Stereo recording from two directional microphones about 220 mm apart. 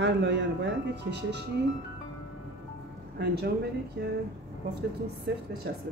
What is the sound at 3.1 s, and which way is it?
Speech, 45° right (ahead or behind).